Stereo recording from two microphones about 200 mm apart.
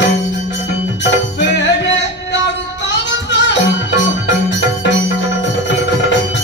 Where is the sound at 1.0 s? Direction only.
60° left (ahead or behind).